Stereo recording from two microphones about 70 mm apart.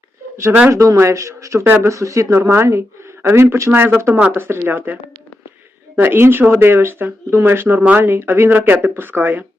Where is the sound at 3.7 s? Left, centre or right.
Right.